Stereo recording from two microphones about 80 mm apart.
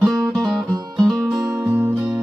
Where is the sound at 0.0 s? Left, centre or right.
Centre.